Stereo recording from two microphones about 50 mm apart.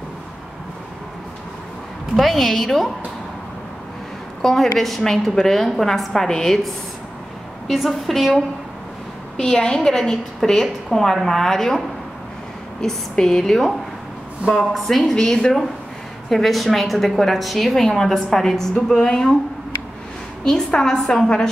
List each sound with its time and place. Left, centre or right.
2.1 s a woman's voice: centre
4.4 s a woman's voice: centre
9.4 s a woman's voice: centre
12.8 s a woman's voice: centre
20.4 s a woman's voice: centre